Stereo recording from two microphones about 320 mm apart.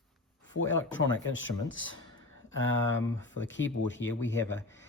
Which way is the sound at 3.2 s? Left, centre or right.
Left.